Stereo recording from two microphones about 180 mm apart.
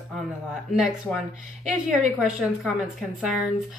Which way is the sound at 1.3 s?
40° right (ahead or behind).